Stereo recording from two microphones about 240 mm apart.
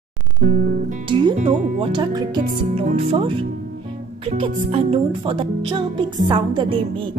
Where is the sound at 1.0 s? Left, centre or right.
Centre.